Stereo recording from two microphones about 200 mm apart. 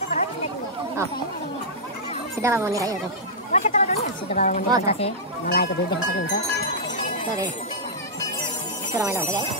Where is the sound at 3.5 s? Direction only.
35° left (ahead or behind).